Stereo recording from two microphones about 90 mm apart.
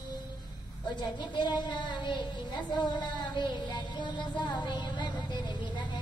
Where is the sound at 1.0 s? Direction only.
55° left (ahead or behind).